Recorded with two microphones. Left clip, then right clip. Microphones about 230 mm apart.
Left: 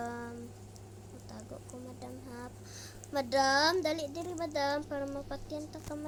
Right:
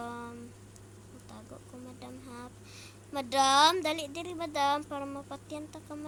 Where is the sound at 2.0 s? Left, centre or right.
Centre.